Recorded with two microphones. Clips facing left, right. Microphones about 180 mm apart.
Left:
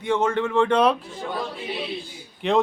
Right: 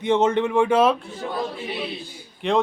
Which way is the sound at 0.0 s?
20° right (ahead or behind).